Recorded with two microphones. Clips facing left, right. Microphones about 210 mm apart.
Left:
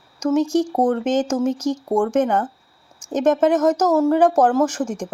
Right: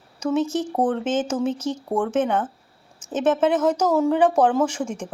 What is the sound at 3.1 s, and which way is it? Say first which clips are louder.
Speech: left 3 dB; 10° left (ahead or behind).